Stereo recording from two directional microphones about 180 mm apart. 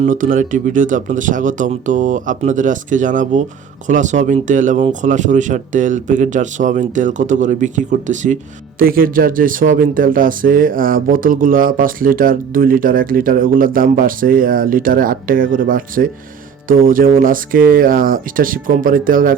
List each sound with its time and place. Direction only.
0.0 s speech: 45° right (ahead or behind)